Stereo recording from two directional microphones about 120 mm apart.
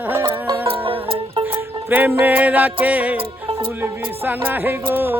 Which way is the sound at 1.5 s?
15° right (ahead or behind).